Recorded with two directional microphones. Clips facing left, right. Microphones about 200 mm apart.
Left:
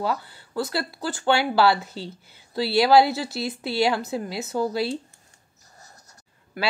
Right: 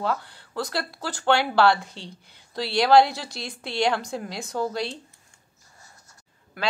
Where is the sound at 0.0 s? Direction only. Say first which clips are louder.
Left 1 dB; 5° left (ahead or behind).